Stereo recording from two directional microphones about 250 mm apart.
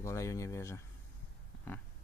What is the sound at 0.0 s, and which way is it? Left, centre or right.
Speech, centre.